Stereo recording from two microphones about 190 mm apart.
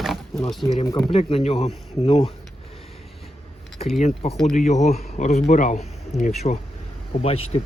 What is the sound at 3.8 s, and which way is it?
A man's voice, 30° left (ahead or behind).